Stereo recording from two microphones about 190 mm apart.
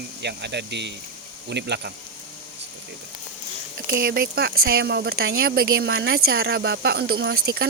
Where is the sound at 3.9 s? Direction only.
50° right (ahead or behind).